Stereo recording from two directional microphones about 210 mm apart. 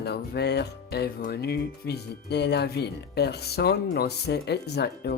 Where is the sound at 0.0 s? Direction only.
50° left (ahead or behind).